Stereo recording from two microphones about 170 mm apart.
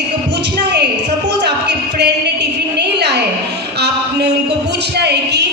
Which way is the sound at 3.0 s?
80° right.